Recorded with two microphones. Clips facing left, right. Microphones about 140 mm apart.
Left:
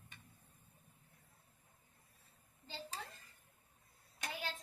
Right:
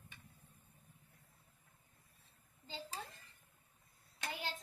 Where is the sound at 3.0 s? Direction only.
20° right (ahead or behind).